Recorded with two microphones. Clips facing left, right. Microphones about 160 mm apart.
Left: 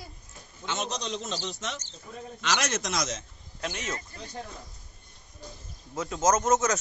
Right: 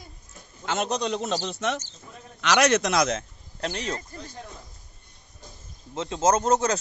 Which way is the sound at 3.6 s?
35° right (ahead or behind).